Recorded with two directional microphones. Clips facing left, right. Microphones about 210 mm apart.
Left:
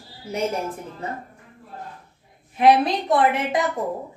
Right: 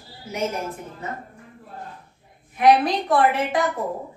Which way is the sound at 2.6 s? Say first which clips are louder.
Even; 25° left (ahead or behind).